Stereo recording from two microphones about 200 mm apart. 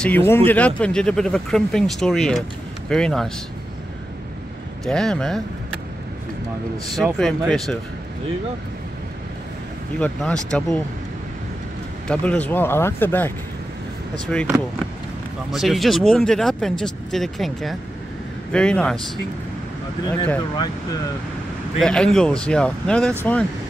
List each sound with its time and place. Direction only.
0.0 s speech: 10° left (ahead or behind)
4.8 s speech: 5° left (ahead or behind)
7.2 s speech: centre (ahead or behind)
9.9 s speech: 5° left (ahead or behind)
12.1 s speech: 5° left (ahead or behind)
14.3 s speech: 5° left (ahead or behind)
15.5 s speech: centre (ahead or behind)
20.5 s speech: 20° left (ahead or behind)
21.7 s speech: 5° left (ahead or behind)